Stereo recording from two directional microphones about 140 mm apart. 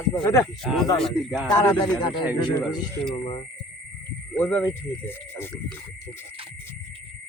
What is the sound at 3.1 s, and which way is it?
Speech, 45° left (ahead or behind).